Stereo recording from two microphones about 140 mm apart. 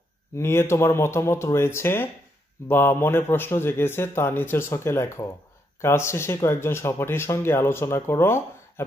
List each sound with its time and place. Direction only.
0.4 s speech: 20° left (ahead or behind)